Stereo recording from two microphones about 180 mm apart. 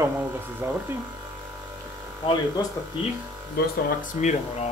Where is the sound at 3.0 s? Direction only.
25° left (ahead or behind).